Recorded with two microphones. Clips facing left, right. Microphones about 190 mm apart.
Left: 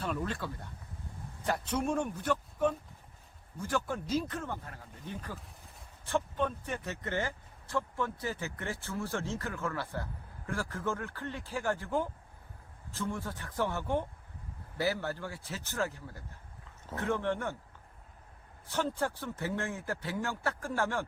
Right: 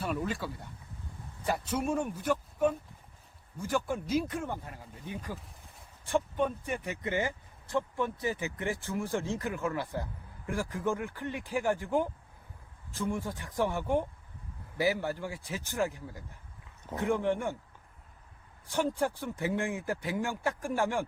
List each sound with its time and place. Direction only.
0.0 s speech: 10° right (ahead or behind)
18.6 s speech: 15° right (ahead or behind)